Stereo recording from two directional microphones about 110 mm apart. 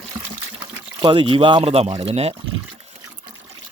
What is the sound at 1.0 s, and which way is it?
Speech, 50° right (ahead or behind).